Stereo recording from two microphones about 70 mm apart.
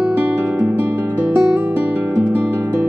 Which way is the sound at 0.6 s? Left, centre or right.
Right.